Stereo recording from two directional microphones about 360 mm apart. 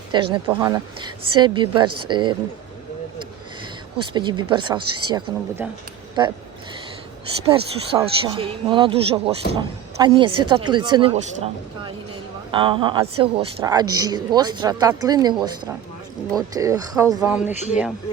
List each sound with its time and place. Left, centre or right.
0.1 s a woman's voice: centre
4.1 s a woman's voice: centre
7.4 s a woman's voice: centre
17.5 s speech: centre